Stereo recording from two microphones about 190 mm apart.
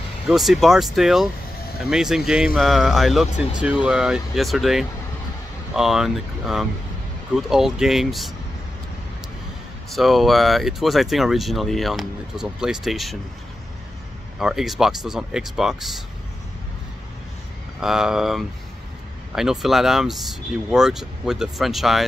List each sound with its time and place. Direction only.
0.3 s speech: centre (ahead or behind)
9.9 s speech: centre (ahead or behind)
14.4 s speech: centre (ahead or behind)
17.7 s speech: 5° right (ahead or behind)